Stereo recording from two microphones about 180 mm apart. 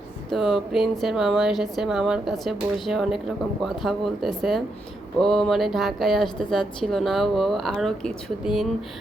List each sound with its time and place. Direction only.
0.3 s a woman's voice: centre (ahead or behind)